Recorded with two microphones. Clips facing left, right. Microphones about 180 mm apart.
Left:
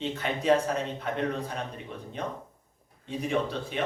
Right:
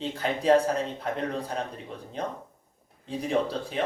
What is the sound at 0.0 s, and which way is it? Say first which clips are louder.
Speech: right 2 dB; 35° right (ahead or behind).